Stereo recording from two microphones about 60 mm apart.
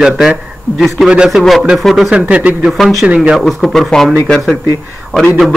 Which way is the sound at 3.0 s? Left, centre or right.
Right.